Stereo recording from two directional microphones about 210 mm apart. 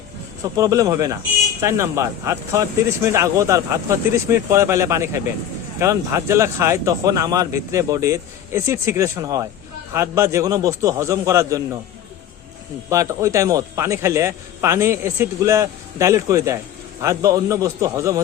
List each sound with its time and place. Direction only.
0.5 s speech: 15° right (ahead or behind)
12.9 s speech: 15° right (ahead or behind)